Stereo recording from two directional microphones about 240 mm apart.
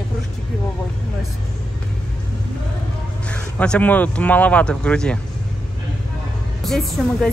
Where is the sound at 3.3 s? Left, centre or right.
Centre.